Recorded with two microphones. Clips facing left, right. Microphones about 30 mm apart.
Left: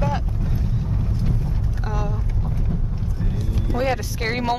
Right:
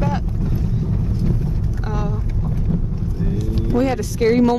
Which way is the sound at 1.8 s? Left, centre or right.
Centre.